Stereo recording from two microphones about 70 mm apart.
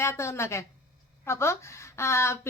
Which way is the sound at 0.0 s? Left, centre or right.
Left.